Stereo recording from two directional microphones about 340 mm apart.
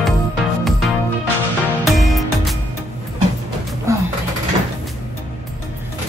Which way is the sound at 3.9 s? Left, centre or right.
Centre.